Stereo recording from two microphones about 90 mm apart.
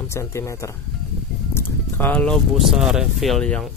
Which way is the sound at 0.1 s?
30° left (ahead or behind).